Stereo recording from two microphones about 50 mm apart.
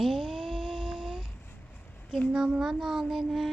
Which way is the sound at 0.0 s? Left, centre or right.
Centre.